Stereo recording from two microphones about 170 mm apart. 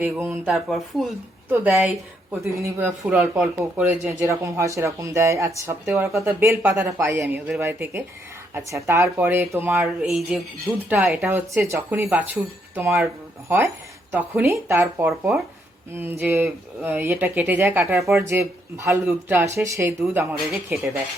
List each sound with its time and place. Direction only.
0.0 s speech: 10° right (ahead or behind)
0.5 s speech: centre (ahead or behind)
1.5 s speech: 10° right (ahead or behind)
14.1 s speech: 10° right (ahead or behind)